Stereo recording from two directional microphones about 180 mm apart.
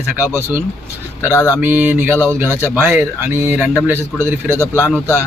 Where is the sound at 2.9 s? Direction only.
10° right (ahead or behind).